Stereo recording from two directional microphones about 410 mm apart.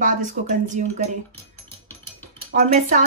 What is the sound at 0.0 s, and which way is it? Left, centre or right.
Speech, centre.